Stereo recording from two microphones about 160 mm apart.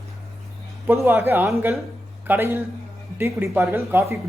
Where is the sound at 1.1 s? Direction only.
15° right (ahead or behind).